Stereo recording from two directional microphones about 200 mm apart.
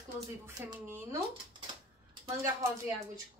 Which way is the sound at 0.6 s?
15° right (ahead or behind).